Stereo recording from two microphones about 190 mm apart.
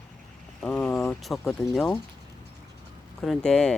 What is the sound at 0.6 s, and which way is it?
Speech, 5° left (ahead or behind).